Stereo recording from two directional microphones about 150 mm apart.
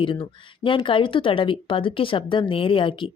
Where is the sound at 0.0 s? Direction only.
35° left (ahead or behind).